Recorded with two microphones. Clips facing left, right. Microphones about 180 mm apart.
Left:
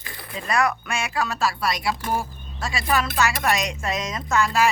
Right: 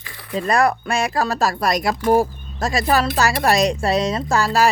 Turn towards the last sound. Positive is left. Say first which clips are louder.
# right 3 dB
turn(degrees=-35)  # may be behind; listen again after turning